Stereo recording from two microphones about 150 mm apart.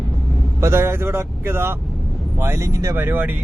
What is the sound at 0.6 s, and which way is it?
Speech, 15° right (ahead or behind).